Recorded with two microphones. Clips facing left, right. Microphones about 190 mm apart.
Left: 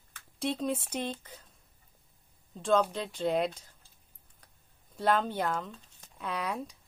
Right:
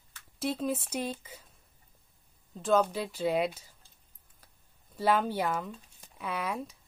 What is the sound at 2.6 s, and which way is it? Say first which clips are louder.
Speech: right 1 dB; 5° right (ahead or behind).